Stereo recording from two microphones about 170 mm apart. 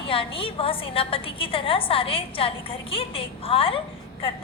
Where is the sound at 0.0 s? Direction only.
30° left (ahead or behind).